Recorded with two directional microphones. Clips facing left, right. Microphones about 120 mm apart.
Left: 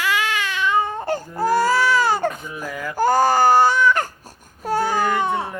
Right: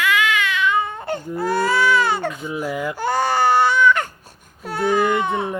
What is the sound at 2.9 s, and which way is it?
Baby cry, 40° left (ahead or behind).